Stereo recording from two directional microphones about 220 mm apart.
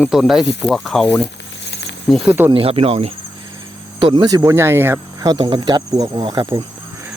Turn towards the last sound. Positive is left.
turn(degrees=-20)  # may be behind; listen again after turning